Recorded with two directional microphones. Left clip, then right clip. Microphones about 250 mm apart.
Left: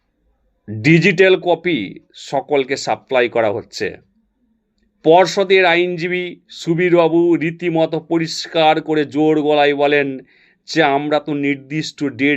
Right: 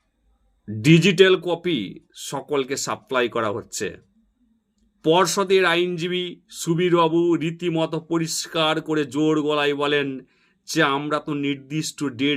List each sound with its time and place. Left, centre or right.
0.8 s speech: centre
5.0 s speech: centre